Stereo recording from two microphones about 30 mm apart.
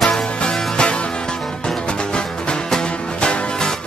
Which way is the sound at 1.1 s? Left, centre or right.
Left.